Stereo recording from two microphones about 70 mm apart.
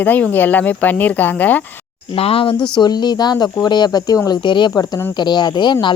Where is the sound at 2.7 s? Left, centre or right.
Left.